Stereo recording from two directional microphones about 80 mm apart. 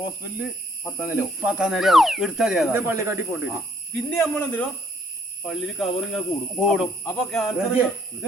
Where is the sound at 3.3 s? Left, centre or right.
Centre.